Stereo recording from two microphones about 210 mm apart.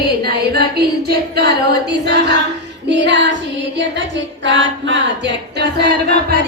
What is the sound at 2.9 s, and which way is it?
Female singing, 55° right (ahead or behind).